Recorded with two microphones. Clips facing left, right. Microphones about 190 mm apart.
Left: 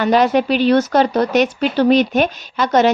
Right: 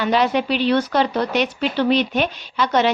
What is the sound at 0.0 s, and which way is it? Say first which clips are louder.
A woman's voice: left 4 dB; 45° left (ahead or behind).